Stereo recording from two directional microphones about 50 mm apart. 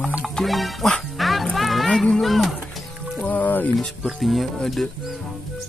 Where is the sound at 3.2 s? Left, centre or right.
Left.